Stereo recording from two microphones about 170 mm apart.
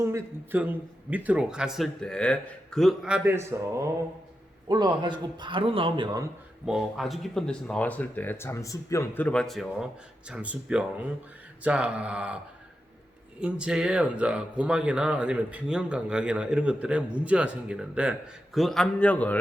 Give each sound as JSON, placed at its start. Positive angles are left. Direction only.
{"t": 0.0, "sound": "a man's voice", "side_deg": -15}
{"t": 4.7, "sound": "a man's voice", "side_deg": -25}
{"t": 6.7, "sound": "speech", "side_deg": 0}
{"t": 13.4, "sound": "speech", "side_deg": -5}